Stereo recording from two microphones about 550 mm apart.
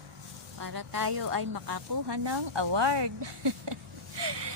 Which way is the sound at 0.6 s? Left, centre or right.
Right.